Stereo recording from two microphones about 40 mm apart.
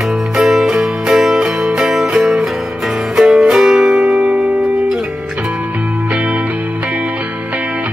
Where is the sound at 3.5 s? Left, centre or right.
Centre.